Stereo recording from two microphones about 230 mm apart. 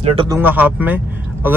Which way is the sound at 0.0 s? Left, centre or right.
Right.